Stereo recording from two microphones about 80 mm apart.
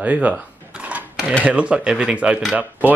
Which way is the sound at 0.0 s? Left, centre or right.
Centre.